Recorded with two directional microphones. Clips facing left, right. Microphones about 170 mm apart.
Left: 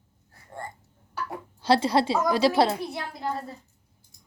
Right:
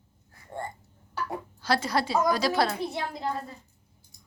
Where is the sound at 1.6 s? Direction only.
30° left (ahead or behind).